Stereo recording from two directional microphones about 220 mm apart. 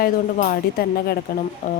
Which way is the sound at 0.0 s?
40° left (ahead or behind).